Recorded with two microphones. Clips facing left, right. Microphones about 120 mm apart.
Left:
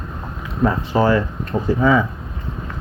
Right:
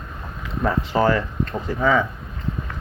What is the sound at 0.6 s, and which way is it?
Speech, 20° left (ahead or behind).